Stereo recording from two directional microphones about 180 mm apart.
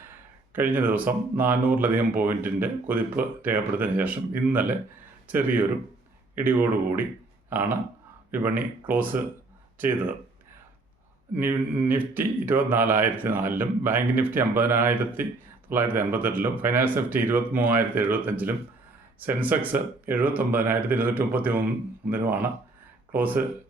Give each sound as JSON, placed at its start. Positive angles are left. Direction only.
{"t": 0.0, "sound": "speech", "side_deg": -10}
{"t": 11.3, "sound": "speech", "side_deg": -10}